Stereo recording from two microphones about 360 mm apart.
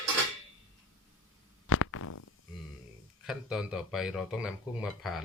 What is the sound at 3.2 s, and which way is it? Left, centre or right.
Speech, centre.